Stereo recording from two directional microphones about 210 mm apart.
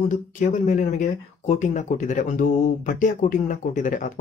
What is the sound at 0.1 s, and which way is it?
Speech, 40° left (ahead or behind).